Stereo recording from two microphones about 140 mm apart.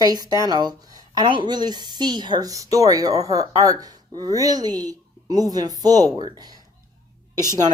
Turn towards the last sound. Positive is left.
turn(degrees=-30)  # may be behind; listen again after turning